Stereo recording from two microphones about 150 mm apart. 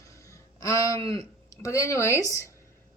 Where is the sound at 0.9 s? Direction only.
40° right (ahead or behind).